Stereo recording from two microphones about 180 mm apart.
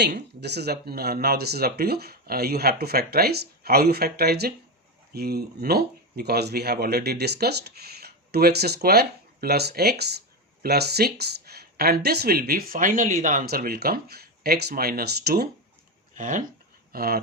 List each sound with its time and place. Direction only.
0.3 s speech: 65° right (ahead or behind)
16.1 s speech: 45° right (ahead or behind)
16.9 s speech: 55° right (ahead or behind)